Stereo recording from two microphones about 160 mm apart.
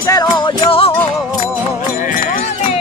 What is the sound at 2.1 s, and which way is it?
Music, 60° left (ahead or behind).